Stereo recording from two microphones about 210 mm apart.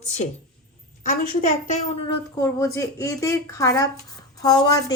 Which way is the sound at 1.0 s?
40° left (ahead or behind).